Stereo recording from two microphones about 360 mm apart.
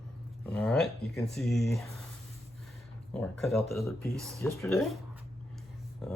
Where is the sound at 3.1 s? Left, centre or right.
Centre.